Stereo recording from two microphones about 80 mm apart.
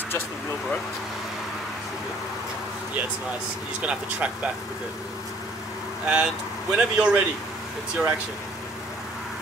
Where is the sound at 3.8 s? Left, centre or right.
Centre.